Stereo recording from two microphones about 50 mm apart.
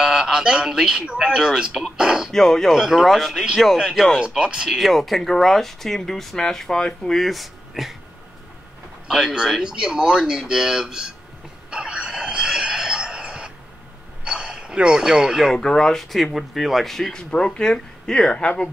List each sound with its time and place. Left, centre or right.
0.0 s speech: centre
2.3 s speech: centre
2.7 s speech: centre
3.1 s speech: centre
4.6 s speech: centre
9.0 s speech: centre
11.7 s a sound: centre
15.5 s speech: centre
17.1 s speech: centre